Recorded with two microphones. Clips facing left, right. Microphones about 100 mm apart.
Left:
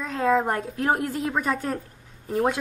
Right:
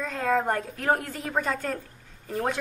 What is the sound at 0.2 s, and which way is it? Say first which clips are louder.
Speech: left 3 dB; 15° left (ahead or behind).